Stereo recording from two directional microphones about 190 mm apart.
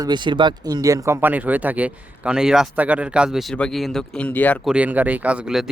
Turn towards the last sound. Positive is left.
turn(degrees=-5)  # may be behind; listen again after turning